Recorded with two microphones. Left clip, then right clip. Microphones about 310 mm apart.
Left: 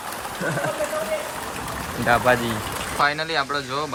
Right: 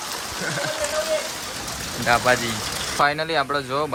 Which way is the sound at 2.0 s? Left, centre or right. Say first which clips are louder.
Even; centre.